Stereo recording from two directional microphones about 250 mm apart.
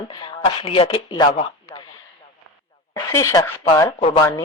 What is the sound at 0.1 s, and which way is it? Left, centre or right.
Speech, centre.